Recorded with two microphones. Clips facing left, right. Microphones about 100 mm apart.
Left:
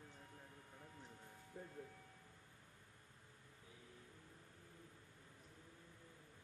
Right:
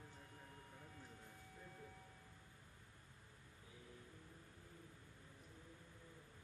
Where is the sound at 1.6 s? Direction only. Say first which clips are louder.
Left 8 dB; 50° left (ahead or behind).